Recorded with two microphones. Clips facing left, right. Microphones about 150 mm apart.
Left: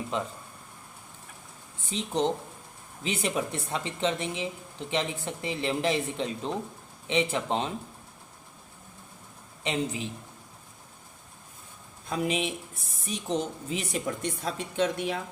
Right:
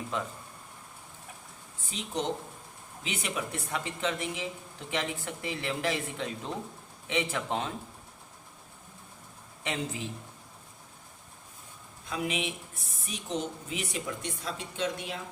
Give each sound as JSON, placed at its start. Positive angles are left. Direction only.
{"t": 0.1, "sound": "speech", "side_deg": 20}
{"t": 1.9, "sound": "speech", "side_deg": 25}
{"t": 9.6, "sound": "speech", "side_deg": 20}
{"t": 12.0, "sound": "a woman's voice", "side_deg": 35}
{"t": 14.2, "sound": "a woman's voice", "side_deg": 50}